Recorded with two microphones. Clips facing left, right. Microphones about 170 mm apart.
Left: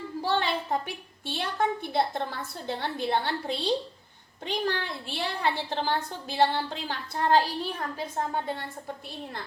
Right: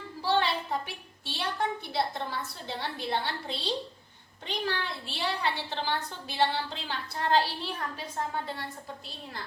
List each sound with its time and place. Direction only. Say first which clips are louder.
0.2 s a woman's voice: even; 50° left (ahead or behind)